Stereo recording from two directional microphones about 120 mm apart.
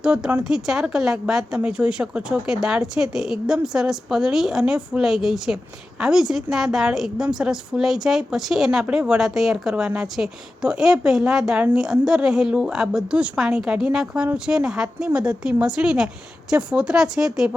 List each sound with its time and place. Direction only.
0.0 s a woman's voice: 5° right (ahead or behind)